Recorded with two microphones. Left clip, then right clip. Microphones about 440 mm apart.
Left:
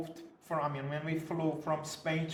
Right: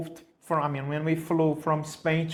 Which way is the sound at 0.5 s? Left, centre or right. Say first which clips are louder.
Right 7 dB; right.